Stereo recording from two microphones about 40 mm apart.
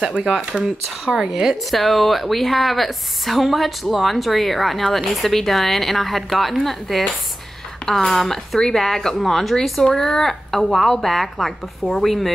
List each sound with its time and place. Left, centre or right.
0.3 s speech: centre
1.7 s a woman's voice: centre
10.7 s a woman's voice: centre